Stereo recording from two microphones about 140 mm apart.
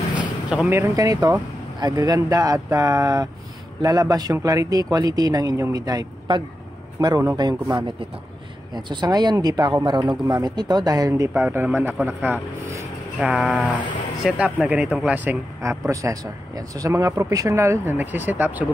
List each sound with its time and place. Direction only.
0.2 s a man's voice: 10° right (ahead or behind)
13.5 s speech: 10° left (ahead or behind)
14.2 s speech: 5° right (ahead or behind)
15.1 s speech: 15° right (ahead or behind)